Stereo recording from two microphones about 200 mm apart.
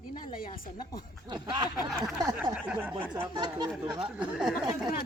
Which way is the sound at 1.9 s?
Centre (ahead or behind).